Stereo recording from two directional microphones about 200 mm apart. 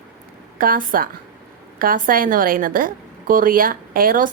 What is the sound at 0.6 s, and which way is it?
A woman's voice, 45° right (ahead or behind).